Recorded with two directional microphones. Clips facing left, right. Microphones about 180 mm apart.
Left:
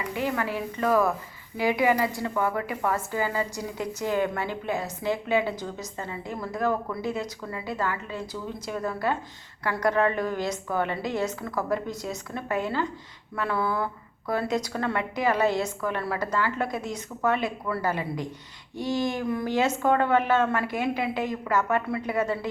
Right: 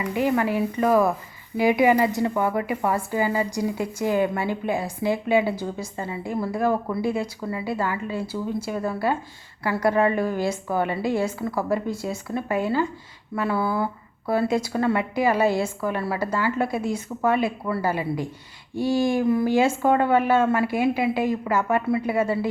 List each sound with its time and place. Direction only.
0.1 s a woman's voice: 15° right (ahead or behind)